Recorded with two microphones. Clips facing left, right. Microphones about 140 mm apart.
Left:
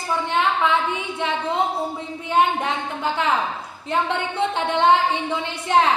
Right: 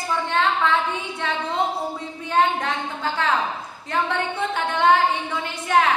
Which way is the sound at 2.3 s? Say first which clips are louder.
Left 1 dB; 20° left (ahead or behind).